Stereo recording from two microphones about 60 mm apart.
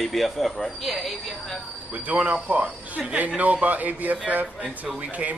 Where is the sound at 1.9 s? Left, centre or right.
Right.